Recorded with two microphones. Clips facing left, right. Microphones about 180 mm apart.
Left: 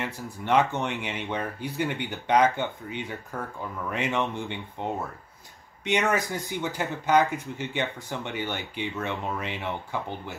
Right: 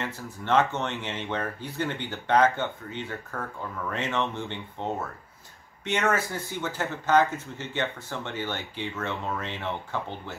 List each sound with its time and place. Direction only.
0.0 s speech: 15° left (ahead or behind)